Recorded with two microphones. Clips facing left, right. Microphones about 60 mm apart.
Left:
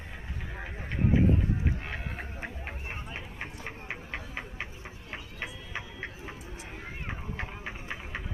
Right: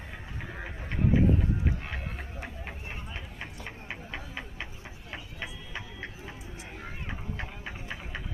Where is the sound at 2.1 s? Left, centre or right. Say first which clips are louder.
Left 2 dB; left.